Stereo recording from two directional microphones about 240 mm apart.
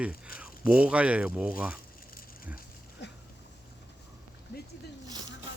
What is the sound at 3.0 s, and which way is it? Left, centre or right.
Dog, left.